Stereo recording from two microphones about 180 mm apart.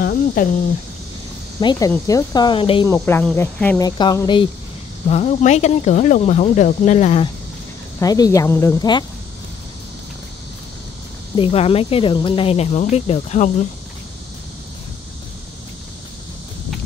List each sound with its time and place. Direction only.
0.0 s cricket: 55° left (ahead or behind)
1.6 s speech: 20° left (ahead or behind)
2.9 s speech: 10° left (ahead or behind)
3.8 s speech: 25° left (ahead or behind)
5.1 s speech: 40° left (ahead or behind)
8.0 s speech: 20° left (ahead or behind)
11.3 s speech: 30° left (ahead or behind)